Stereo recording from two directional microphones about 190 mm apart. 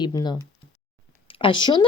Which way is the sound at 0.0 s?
20° left (ahead or behind).